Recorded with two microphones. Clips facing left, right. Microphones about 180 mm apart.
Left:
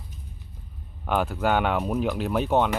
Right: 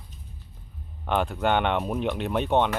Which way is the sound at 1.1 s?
5° left (ahead or behind).